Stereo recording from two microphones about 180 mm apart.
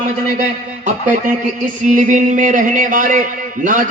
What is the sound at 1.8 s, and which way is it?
A man's voice, 45° right (ahead or behind).